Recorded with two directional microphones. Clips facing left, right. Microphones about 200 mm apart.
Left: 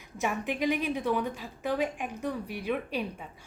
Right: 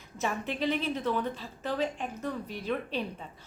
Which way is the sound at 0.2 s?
15° left (ahead or behind).